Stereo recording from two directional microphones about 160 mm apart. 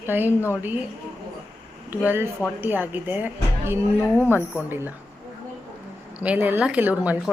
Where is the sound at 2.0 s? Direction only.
15° right (ahead or behind).